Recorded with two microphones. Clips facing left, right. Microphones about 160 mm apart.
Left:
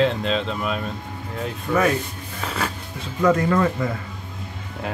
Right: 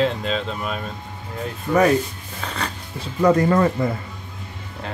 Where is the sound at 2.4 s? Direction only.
5° left (ahead or behind).